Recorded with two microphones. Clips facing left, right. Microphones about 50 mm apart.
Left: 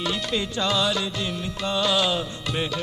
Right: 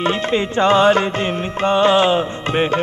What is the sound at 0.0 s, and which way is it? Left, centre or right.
Music, right.